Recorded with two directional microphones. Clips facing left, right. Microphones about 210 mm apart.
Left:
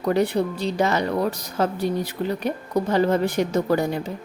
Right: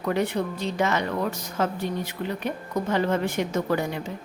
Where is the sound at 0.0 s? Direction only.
35° left (ahead or behind).